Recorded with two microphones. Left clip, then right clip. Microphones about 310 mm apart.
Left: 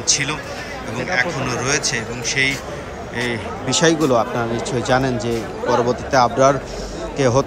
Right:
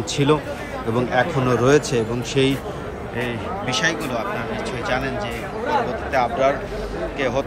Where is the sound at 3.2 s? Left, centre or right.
Centre.